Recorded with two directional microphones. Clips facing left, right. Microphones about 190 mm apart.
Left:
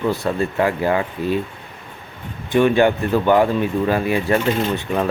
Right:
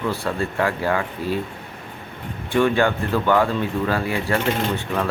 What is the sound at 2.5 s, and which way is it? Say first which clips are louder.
Speech: left 4 dB; 20° left (ahead or behind).